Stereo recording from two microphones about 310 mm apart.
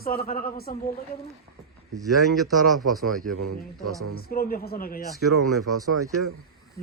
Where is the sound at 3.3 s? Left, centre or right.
Right.